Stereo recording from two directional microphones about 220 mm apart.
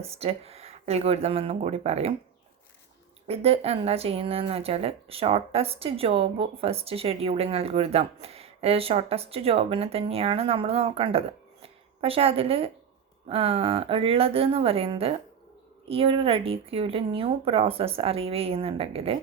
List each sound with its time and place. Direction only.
0.0 s speech: 25° right (ahead or behind)
3.2 s speech: 25° right (ahead or behind)